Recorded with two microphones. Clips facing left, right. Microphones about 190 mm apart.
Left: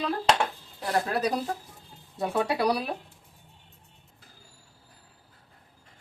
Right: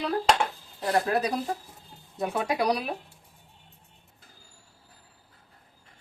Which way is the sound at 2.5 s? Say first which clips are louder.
Right 2 dB; 35° left (ahead or behind).